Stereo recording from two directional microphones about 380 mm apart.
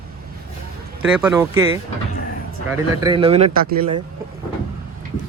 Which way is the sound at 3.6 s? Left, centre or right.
Right.